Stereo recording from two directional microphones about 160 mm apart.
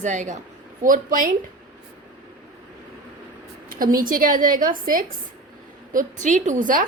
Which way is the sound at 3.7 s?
60° right (ahead or behind).